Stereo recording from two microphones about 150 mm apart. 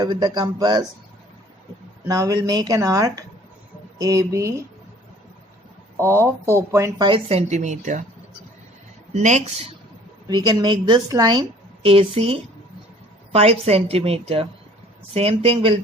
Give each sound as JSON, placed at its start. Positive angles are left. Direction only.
{"t": 0.0, "sound": "speech", "side_deg": -25}
{"t": 2.0, "sound": "speech", "side_deg": -25}
{"t": 6.0, "sound": "speech", "side_deg": -20}
{"t": 7.1, "sound": "a woman's voice", "side_deg": -45}
{"t": 9.1, "sound": "a woman's voice", "side_deg": -50}
{"t": 10.2, "sound": "a woman's voice", "side_deg": -30}